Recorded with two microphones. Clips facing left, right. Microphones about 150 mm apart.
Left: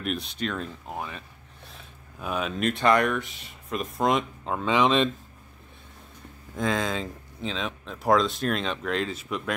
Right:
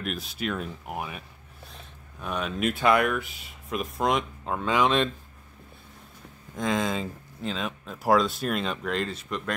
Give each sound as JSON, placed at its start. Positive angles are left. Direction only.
{"t": 0.0, "sound": "speech", "side_deg": 0}
{"t": 1.7, "sound": "speech", "side_deg": 5}
{"t": 6.5, "sound": "speech", "side_deg": 0}